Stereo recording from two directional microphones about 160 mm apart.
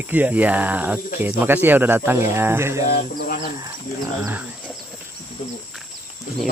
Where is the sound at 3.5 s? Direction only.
25° right (ahead or behind).